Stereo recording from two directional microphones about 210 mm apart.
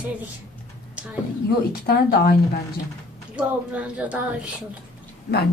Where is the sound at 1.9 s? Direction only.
50° left (ahead or behind).